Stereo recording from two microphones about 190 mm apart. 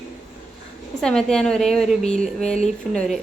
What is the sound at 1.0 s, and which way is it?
A woman's voice, 5° left (ahead or behind).